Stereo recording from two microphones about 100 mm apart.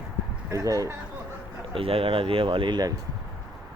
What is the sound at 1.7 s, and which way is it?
Speech, 70° right (ahead or behind).